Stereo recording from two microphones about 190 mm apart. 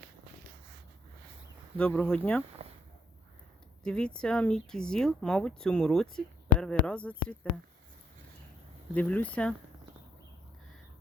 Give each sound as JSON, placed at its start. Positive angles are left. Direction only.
{"t": 1.8, "sound": "speech", "side_deg": 5}
{"t": 2.6, "sound": "a sound", "side_deg": -35}
{"t": 3.8, "sound": "speech", "side_deg": 5}
{"t": 9.0, "sound": "speech", "side_deg": 10}